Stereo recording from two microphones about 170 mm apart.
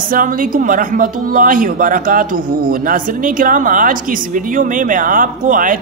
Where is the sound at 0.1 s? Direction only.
55° right (ahead or behind).